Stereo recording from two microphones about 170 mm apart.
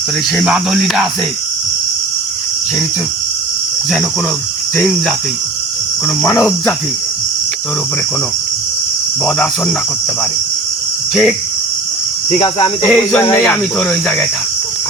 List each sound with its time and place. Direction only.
0.3 s speech: 5° right (ahead or behind)
4.8 s speech: centre (ahead or behind)
9.2 s speech: 5° left (ahead or behind)
11.1 s speech: centre (ahead or behind)
12.4 s speech: 30° left (ahead or behind)
12.9 s speech: 5° left (ahead or behind)
13.2 s speech: 25° left (ahead or behind)
13.5 s speech: 5° left (ahead or behind)